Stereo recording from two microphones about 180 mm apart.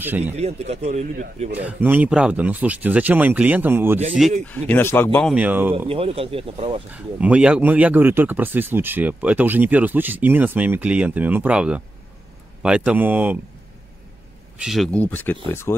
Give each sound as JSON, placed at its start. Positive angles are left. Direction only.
{"t": 0.2, "sound": "speech", "side_deg": -35}
{"t": 1.5, "sound": "speech", "side_deg": -10}
{"t": 4.5, "sound": "speech", "side_deg": 10}
{"t": 5.3, "sound": "speech", "side_deg": -10}
{"t": 5.9, "sound": "speech", "side_deg": -30}
{"t": 6.9, "sound": "speech", "side_deg": -5}
{"t": 14.6, "sound": "speech", "side_deg": 0}